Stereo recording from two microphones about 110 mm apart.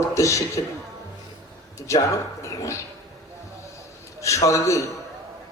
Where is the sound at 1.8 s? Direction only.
30° left (ahead or behind).